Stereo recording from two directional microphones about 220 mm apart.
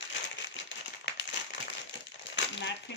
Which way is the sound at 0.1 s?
55° left (ahead or behind).